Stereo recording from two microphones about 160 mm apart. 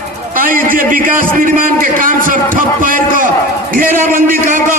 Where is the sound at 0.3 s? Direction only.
60° right (ahead or behind).